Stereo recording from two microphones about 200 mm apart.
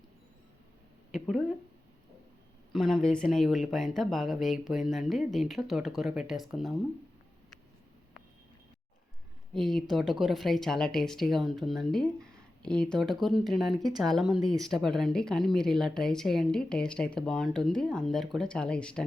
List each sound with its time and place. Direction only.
1.1 s speech: 5° left (ahead or behind)
2.7 s speech: centre (ahead or behind)
9.6 s speech: centre (ahead or behind)